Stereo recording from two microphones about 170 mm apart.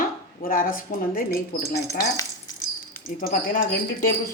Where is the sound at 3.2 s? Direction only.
55° left (ahead or behind).